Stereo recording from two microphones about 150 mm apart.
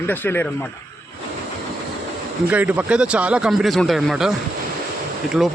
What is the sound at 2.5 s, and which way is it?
Speech, 10° right (ahead or behind).